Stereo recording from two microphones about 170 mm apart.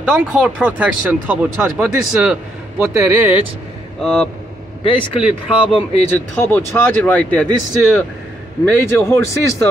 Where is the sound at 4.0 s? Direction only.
5° left (ahead or behind).